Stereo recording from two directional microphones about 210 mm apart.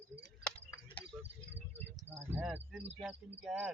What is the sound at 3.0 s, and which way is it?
Cricket, 5° right (ahead or behind).